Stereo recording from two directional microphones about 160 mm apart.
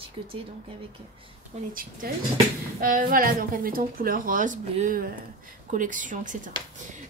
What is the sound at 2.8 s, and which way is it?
A woman's voice, 60° right (ahead or behind).